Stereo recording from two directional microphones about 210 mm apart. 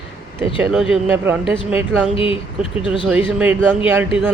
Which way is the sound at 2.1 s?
25° left (ahead or behind).